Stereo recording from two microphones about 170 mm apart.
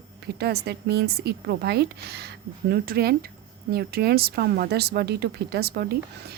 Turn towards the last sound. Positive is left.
turn(degrees=-70)  # may be behind; listen again after turning